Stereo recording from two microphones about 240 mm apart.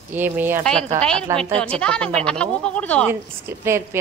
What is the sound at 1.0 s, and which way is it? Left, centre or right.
Speech, centre.